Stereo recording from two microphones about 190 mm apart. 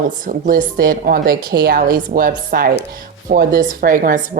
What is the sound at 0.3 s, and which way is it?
A woman's voice, 45° right (ahead or behind).